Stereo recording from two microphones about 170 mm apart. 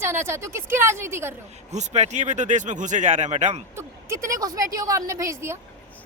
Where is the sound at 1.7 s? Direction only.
40° right (ahead or behind).